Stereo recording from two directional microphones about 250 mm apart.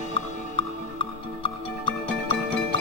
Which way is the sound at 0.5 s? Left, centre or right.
Left.